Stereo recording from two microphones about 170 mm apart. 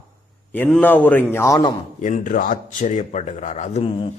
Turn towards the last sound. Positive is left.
turn(degrees=40)  # may be behind; listen again after turning